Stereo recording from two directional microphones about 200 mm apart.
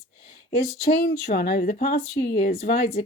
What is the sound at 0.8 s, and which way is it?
Speech, 55° left (ahead or behind).